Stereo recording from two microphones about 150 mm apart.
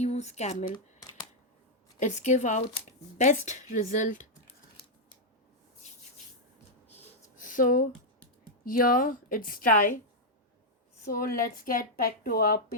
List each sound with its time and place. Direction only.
0.0 s speech: 50° left (ahead or behind)
2.0 s a woman's voice: 50° left (ahead or behind)
7.3 s a sound: 60° left (ahead or behind)
8.6 s speech: 70° left (ahead or behind)
11.0 s speech: 75° left (ahead or behind)